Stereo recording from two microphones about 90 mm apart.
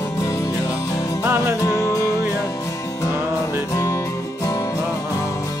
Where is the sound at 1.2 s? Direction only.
30° right (ahead or behind).